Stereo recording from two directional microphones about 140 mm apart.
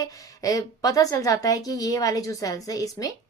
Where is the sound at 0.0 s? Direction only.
25° left (ahead or behind).